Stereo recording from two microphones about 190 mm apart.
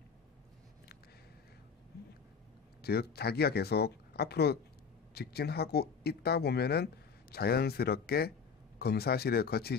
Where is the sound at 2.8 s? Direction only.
55° left (ahead or behind).